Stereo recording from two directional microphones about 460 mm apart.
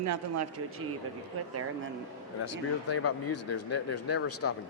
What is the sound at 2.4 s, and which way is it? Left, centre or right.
Speech, left.